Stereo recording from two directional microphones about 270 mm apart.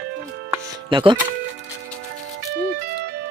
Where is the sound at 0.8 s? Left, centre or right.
Centre.